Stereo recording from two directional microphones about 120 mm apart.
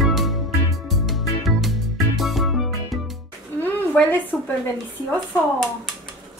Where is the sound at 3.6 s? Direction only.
15° left (ahead or behind).